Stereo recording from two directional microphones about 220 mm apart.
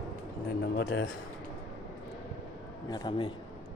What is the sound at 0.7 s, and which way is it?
Speech, 55° left (ahead or behind).